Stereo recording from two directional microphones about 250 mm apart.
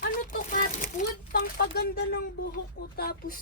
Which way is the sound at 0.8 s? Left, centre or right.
Left.